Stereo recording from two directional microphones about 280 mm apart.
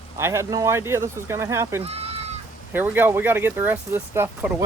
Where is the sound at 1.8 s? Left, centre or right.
Right.